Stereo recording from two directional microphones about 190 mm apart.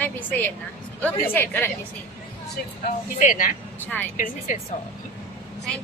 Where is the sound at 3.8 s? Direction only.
10° left (ahead or behind).